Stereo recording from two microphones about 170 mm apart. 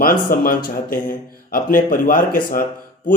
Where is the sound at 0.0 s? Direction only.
55° left (ahead or behind).